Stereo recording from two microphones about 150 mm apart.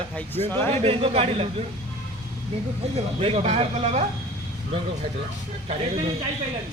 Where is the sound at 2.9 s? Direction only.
40° right (ahead or behind).